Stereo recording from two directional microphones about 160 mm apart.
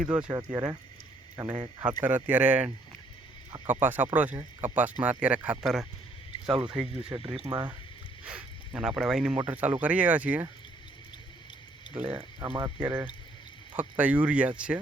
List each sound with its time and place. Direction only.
0.0 s speech: 5° right (ahead or behind)
0.3 s speech: 25° right (ahead or behind)
1.8 s speech: 10° right (ahead or behind)
7.5 s speech: 25° right (ahead or behind)
8.2 s speech: 5° right (ahead or behind)
11.9 s speech: 10° right (ahead or behind)
12.5 s speech: 25° right (ahead or behind)
13.7 s speech: 10° right (ahead or behind)